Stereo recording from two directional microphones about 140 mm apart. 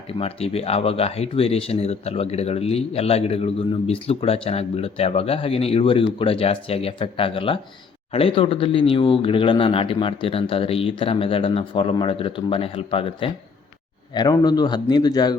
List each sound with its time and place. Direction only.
0.1 s a man's voice: 45° left (ahead or behind)